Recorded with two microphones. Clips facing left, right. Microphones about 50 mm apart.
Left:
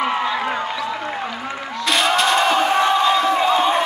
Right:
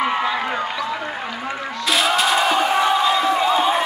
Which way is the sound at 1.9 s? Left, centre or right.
Centre.